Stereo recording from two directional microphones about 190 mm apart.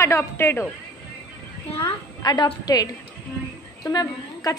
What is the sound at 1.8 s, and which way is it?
A woman's voice, 25° left (ahead or behind).